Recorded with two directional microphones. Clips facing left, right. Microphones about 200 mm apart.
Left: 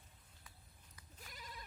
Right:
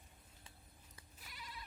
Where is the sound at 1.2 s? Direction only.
45° left (ahead or behind).